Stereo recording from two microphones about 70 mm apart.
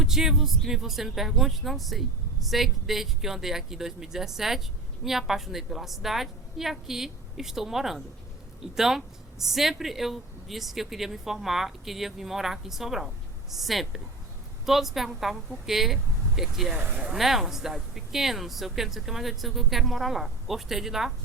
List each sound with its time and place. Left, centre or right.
0.0 s speech: centre
16.7 s speech: right
17.0 s speech: centre